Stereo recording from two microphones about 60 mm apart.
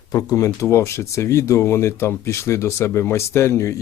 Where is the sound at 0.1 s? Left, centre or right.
Left.